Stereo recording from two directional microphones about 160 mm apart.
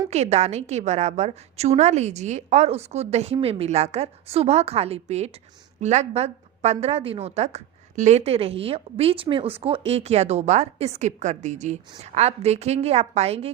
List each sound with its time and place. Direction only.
0.1 s a woman's voice: 45° right (ahead or behind)